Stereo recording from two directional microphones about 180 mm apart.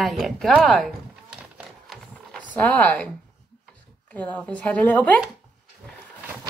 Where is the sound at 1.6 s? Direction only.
Centre (ahead or behind).